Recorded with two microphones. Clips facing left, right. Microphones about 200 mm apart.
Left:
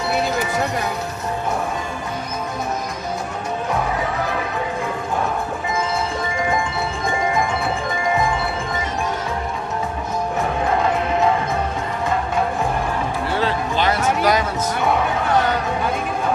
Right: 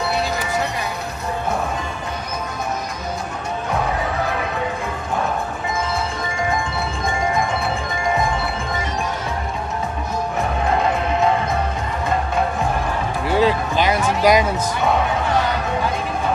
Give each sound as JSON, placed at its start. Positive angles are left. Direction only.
{"t": 13.3, "sound": "music", "side_deg": -15}